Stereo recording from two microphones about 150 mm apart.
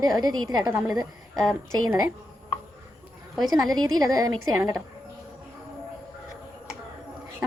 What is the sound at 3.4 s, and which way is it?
A woman's voice, 25° right (ahead or behind).